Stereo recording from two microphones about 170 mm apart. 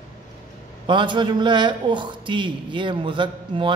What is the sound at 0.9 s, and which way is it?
A man's voice, 30° right (ahead or behind).